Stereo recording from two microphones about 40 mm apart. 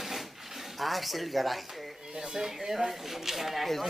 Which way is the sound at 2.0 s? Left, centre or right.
Centre.